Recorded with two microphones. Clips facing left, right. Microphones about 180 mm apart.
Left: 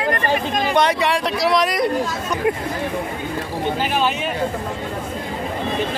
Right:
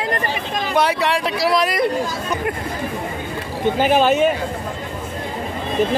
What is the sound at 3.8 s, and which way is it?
Speech, 50° right (ahead or behind).